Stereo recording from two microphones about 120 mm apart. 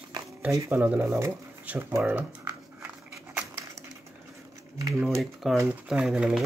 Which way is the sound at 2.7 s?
10° right (ahead or behind).